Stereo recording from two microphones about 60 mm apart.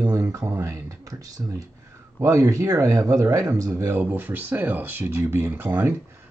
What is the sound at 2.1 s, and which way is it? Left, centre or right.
Speech, right.